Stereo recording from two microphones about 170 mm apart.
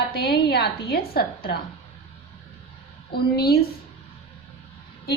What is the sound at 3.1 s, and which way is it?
Speech, 70° left (ahead or behind).